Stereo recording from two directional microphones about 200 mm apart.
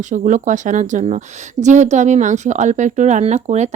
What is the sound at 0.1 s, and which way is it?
Speech, 40° right (ahead or behind).